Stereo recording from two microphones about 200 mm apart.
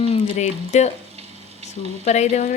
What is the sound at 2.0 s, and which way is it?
Speech, 35° left (ahead or behind).